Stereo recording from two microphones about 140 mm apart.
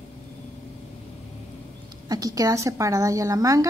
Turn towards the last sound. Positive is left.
turn(degrees=-25)  # may be behind; listen again after turning